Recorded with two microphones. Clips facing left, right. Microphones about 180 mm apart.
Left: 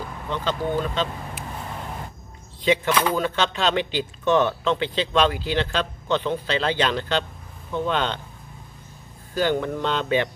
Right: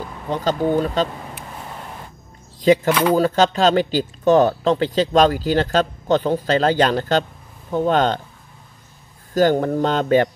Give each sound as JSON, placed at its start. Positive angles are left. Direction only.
{"t": 0.3, "sound": "speech", "side_deg": -40}
{"t": 2.6, "sound": "speech", "side_deg": -40}
{"t": 9.3, "sound": "speech", "side_deg": -40}